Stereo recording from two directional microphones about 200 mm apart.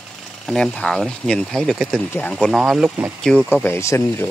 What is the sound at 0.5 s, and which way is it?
Speech, 5° left (ahead or behind).